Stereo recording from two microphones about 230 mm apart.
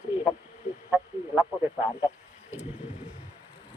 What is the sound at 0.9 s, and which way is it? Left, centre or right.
Speech, centre.